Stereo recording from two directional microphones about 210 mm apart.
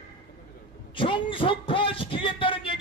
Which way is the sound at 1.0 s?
25° left (ahead or behind).